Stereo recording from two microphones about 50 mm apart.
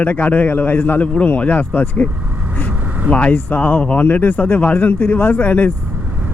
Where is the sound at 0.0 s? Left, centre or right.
Left.